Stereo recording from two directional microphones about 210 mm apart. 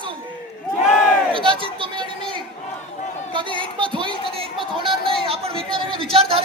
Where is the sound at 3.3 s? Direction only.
25° right (ahead or behind).